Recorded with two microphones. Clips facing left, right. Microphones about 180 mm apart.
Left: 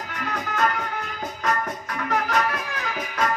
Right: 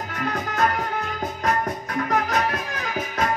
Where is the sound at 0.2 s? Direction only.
40° right (ahead or behind).